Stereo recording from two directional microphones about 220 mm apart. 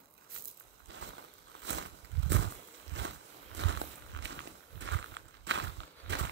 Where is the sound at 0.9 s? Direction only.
55° right (ahead or behind).